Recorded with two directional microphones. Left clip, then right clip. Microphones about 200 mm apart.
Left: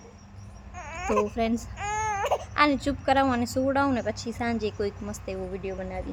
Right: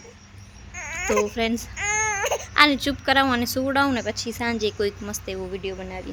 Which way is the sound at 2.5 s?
5° right (ahead or behind).